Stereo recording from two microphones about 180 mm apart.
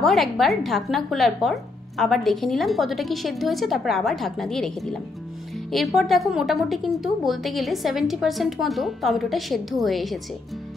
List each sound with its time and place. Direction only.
0.0 s speech: centre (ahead or behind)